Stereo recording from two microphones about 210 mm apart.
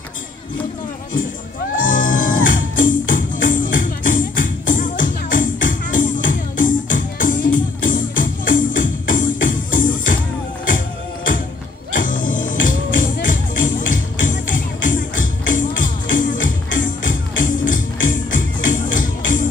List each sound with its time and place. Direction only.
1.8 s music: 40° left (ahead or behind)
12.0 s music: 40° left (ahead or behind)